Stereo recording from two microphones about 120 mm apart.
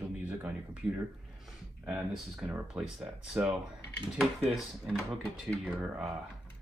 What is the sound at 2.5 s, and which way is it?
Speech, 15° right (ahead or behind).